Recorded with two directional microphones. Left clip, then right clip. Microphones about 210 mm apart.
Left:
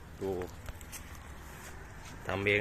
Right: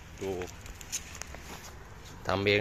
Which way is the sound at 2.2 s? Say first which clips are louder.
Right 3 dB; 30° right (ahead or behind).